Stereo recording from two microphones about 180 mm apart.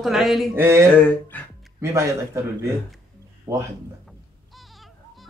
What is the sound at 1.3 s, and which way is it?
Speech, 10° left (ahead or behind).